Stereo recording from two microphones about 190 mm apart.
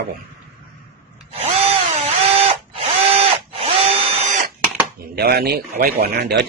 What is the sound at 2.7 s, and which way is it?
Tools, 30° right (ahead or behind).